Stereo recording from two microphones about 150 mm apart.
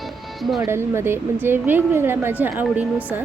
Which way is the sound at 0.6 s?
15° right (ahead or behind).